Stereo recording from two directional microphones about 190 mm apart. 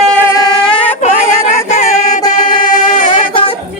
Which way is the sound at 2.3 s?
45° left (ahead or behind).